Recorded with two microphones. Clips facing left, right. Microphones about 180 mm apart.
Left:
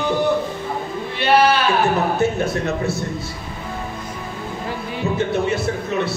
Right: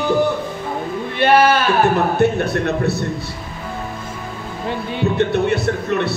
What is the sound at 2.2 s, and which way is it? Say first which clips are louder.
Music: right 3 dB; 65° right (ahead or behind).